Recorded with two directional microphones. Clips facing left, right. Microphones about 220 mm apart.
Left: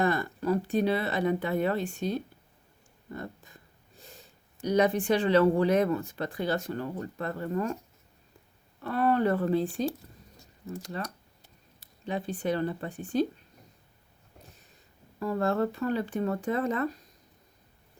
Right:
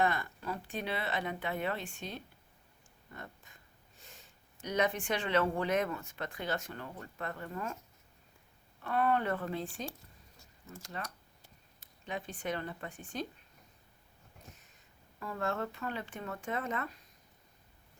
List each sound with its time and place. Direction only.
0.0 s speech: 40° left (ahead or behind)
8.8 s speech: 35° left (ahead or behind)
11.0 s speech: 35° left (ahead or behind)
15.2 s speech: 35° left (ahead or behind)